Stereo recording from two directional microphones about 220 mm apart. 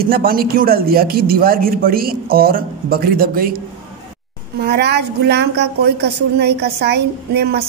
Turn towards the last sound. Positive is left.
turn(degrees=-45)  # may be behind; listen again after turning